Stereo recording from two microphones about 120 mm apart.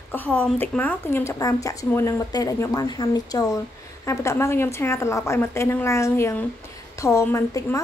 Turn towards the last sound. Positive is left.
turn(degrees=25)  # may be behind; listen again after turning